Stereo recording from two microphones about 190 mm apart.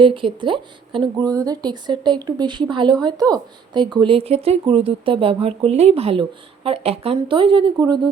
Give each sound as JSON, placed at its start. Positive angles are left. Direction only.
{"t": 0.0, "sound": "a woman's voice", "side_deg": -25}